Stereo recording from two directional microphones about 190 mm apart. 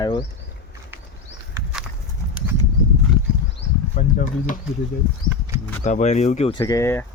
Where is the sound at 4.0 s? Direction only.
40° left (ahead or behind).